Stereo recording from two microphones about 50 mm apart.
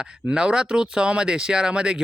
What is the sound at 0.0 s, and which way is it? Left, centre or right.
Speech, centre.